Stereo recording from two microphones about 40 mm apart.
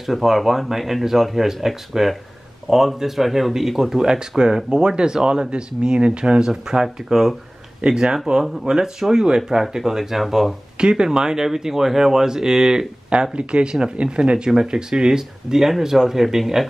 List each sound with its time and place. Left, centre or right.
0.0 s speech: centre
10.8 s speech: centre
13.1 s speech: right; by 16.6 s centre